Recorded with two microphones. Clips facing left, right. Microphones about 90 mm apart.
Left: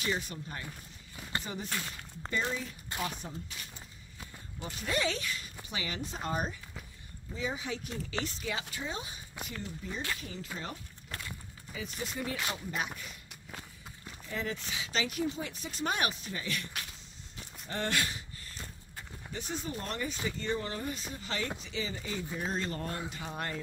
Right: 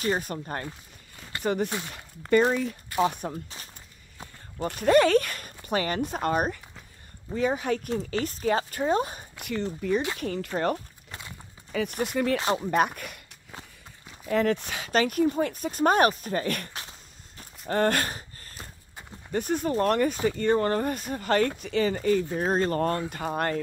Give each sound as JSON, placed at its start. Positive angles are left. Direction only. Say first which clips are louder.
{"t": 0.0, "sound": "speech", "louder": "right 7 dB", "side_deg": -45}
{"t": 1.4, "sound": "speech", "louder": "right 11 dB", "side_deg": -65}
{"t": 2.9, "sound": "speech", "louder": "right 12 dB", "side_deg": 25}
{"t": 4.6, "sound": "speech", "louder": "right 14 dB", "side_deg": -55}
{"t": 9.4, "sound": "speech", "louder": "right 11 dB", "side_deg": -70}
{"t": 11.1, "sound": "clip-clop", "louder": "even", "side_deg": -20}
{"t": 11.7, "sound": "speech", "louder": "right 12 dB", "side_deg": -65}
{"t": 14.2, "sound": "speech", "louder": "right 13 dB", "side_deg": -65}
{"t": 17.4, "sound": "walk", "louder": "right 12 dB", "side_deg": -50}
{"t": 19.3, "sound": "speech", "louder": "right 13 dB", "side_deg": -55}